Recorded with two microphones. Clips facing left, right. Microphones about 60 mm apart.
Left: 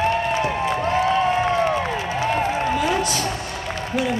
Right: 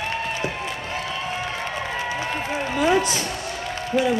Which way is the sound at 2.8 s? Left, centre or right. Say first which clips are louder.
Right 1 dB; right.